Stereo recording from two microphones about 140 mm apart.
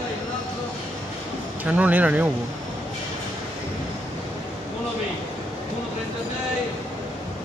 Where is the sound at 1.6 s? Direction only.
10° right (ahead or behind).